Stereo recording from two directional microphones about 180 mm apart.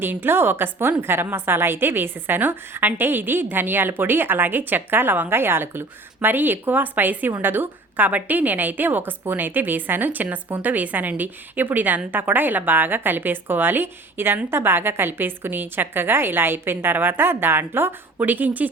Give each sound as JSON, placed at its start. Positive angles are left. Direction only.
{"t": 0.0, "sound": "a woman's voice", "side_deg": -10}